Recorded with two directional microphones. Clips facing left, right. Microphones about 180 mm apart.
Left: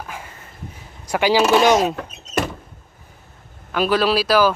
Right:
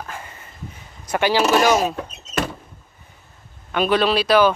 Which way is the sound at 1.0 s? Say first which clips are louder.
Left 2 dB; 10° left (ahead or behind).